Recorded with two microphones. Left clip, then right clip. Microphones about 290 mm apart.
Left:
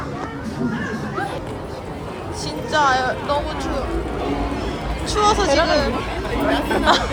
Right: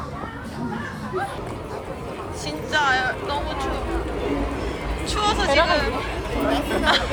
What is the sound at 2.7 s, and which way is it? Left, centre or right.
Speech, centre.